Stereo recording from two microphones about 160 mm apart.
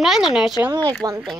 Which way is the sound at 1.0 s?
25° right (ahead or behind).